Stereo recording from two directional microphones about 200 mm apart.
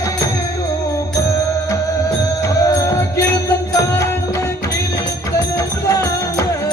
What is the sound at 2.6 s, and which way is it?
Music, 20° left (ahead or behind).